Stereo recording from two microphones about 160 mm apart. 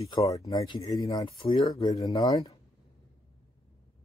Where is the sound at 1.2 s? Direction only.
35° left (ahead or behind).